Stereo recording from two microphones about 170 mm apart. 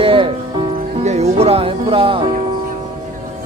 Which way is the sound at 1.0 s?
40° right (ahead or behind).